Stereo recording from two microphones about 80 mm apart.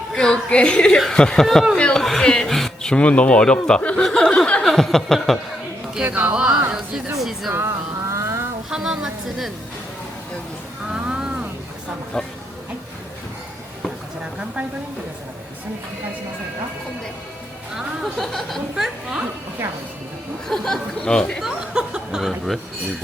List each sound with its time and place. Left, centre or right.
0.1 s speech: centre
4.0 s a sound: centre
4.6 s a woman's voice: centre
6.1 s speech: right
6.3 s a woman's voice: centre
7.5 s vehicle: right
8.7 s speech: centre
10.9 s a sound: centre
12.1 s speech: centre
17.7 s a woman's voice: centre
20.5 s speech: centre
21.4 s speech: centre